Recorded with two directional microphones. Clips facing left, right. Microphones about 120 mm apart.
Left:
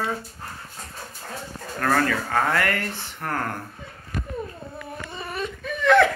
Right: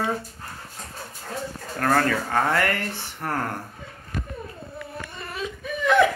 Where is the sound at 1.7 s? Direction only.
40° right (ahead or behind).